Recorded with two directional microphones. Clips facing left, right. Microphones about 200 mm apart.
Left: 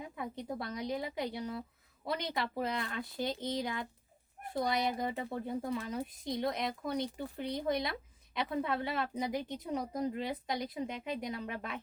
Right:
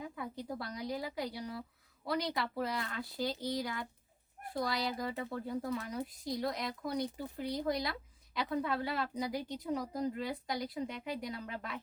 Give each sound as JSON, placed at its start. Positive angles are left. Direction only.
{"t": 0.0, "sound": "speech", "side_deg": 20}